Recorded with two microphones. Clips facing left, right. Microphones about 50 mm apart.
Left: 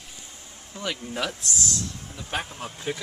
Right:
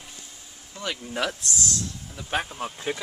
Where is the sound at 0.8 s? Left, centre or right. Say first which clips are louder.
Right 1 dB; centre.